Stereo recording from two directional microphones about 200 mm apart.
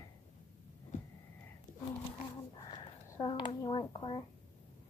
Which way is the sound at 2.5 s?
25° left (ahead or behind).